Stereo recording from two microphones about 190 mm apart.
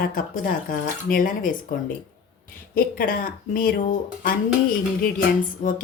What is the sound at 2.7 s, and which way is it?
Speech, 50° left (ahead or behind).